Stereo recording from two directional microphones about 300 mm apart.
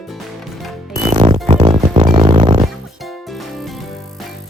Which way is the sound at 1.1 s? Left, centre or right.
Centre.